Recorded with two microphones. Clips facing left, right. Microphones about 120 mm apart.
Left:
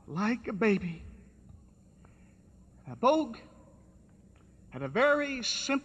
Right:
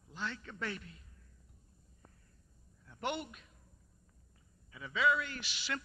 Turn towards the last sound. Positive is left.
turn(degrees=50)  # may be behind; listen again after turning